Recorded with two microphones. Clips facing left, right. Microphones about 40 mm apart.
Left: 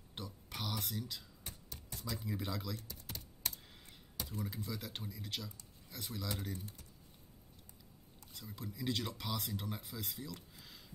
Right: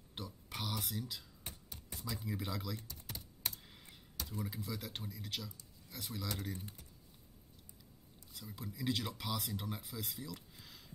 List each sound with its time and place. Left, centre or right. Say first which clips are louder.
0.1 s a sound: right 1 dB; centre
1.5 s typing: left 1 dB; centre
4.4 s speech: even; centre
6.5 s speech: left 1 dB; right
8.4 s speech: even; centre